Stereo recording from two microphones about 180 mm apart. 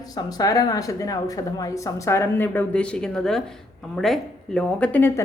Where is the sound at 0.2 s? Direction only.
20° left (ahead or behind).